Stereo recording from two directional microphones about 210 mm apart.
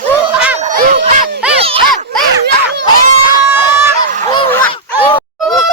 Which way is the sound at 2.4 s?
55° right (ahead or behind).